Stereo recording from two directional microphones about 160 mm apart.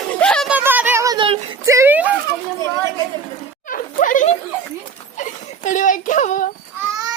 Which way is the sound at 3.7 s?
55° left (ahead or behind).